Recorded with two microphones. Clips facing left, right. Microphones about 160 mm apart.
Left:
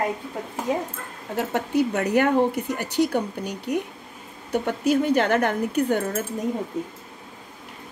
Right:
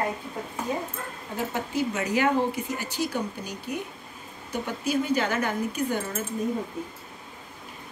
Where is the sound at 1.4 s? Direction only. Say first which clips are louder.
Left 6 dB; 65° left (ahead or behind).